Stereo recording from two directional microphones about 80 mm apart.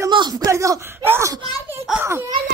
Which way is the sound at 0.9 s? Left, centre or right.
Right.